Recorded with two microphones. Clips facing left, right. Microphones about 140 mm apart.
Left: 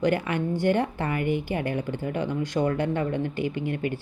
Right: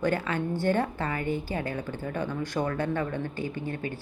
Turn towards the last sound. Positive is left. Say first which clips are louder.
# left 5 dB
turn(degrees=20)  # may be behind; listen again after turning